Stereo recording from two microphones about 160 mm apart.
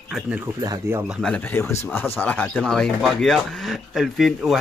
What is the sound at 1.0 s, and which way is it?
Speech, 5° left (ahead or behind).